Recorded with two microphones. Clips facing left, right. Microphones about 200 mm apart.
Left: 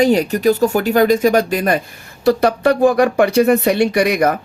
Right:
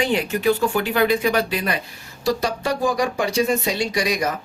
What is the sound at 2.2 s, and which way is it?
Speech, 60° left (ahead or behind).